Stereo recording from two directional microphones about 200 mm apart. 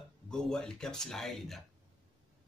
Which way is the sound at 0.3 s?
Centre (ahead or behind).